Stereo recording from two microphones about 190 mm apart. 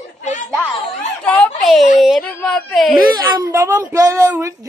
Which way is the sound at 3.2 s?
20° right (ahead or behind).